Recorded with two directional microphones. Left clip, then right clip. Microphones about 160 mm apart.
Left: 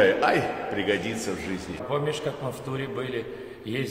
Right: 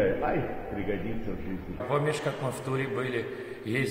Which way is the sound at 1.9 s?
Centre (ahead or behind).